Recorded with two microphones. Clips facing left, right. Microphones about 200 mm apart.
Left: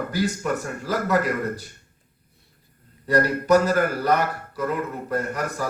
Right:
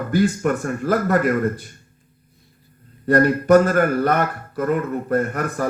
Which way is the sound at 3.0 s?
55° right (ahead or behind).